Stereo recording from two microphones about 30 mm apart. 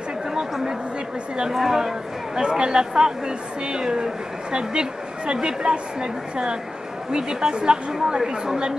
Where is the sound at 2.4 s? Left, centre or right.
Right.